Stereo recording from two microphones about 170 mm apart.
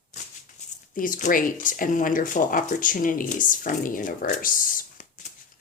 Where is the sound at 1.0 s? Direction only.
50° left (ahead or behind).